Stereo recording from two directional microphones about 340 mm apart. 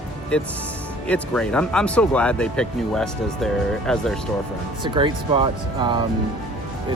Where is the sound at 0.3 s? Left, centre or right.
Centre.